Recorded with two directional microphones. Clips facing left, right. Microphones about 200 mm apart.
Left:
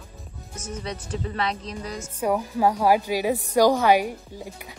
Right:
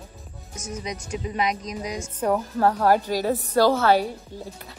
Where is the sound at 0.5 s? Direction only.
10° right (ahead or behind).